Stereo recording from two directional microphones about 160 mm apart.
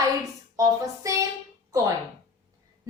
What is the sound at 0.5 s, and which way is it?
Speech, 20° right (ahead or behind).